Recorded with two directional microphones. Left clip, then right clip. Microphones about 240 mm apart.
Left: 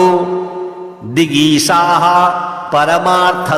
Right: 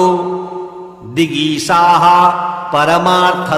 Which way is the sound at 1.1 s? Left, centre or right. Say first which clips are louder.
Left 3 dB; left.